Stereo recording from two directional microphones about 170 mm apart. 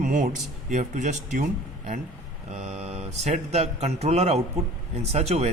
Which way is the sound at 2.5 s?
40° right (ahead or behind).